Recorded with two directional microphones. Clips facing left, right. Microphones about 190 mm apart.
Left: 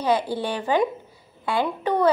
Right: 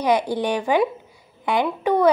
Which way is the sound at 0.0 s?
15° right (ahead or behind).